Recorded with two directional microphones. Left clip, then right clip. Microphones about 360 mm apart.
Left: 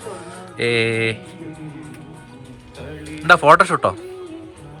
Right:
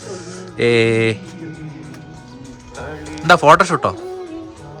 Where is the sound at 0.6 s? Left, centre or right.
Centre.